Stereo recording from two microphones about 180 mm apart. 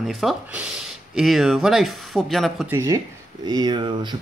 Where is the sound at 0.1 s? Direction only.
Centre (ahead or behind).